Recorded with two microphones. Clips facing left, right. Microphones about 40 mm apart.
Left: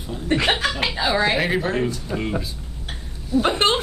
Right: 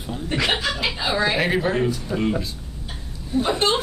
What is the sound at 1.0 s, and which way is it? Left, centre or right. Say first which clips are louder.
Speech: left 3 dB; left.